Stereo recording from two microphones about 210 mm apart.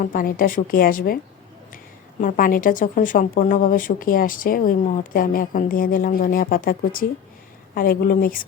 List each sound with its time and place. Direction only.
0.0 s speech: 40° left (ahead or behind)
2.2 s a woman's voice: 40° left (ahead or behind)